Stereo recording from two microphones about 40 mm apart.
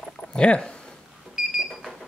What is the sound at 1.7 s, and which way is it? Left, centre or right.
Alarm, centre.